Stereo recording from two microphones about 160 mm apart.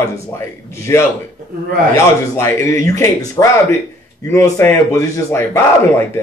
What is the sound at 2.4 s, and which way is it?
Speech, 20° left (ahead or behind).